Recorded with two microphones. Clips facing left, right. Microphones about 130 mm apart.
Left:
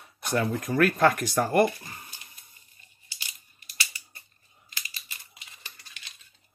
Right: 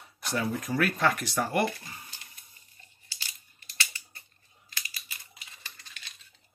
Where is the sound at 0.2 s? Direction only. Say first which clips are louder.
Left 4 dB; 50° left (ahead or behind).